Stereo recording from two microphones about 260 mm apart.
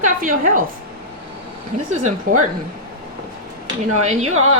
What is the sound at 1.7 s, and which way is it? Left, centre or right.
Speech, right.